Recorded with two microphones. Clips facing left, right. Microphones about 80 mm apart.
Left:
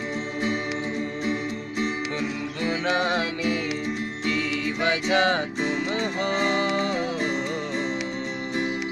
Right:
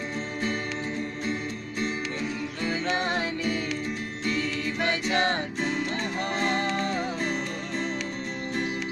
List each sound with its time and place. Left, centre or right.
1.2 s music: centre
3.0 s music: left
4.8 s music: left